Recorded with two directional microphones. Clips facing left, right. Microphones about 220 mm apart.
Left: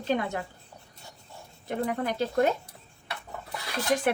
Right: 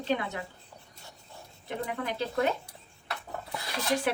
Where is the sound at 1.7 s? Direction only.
45° left (ahead or behind).